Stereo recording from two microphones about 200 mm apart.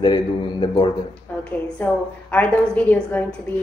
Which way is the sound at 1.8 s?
10° left (ahead or behind).